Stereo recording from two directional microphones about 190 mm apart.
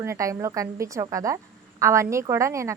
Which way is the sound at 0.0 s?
15° right (ahead or behind).